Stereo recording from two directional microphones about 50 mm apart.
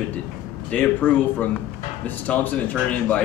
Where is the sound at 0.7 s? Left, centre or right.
Left.